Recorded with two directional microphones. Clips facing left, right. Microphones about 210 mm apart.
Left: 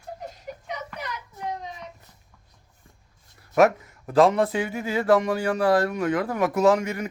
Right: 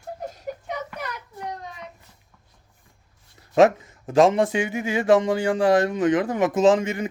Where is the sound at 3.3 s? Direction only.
25° right (ahead or behind).